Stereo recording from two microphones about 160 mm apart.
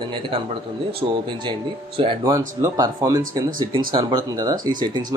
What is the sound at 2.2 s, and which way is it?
Speech, 20° right (ahead or behind).